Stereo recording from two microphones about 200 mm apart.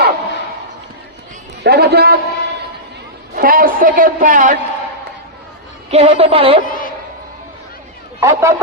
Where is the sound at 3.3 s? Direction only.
45° right (ahead or behind).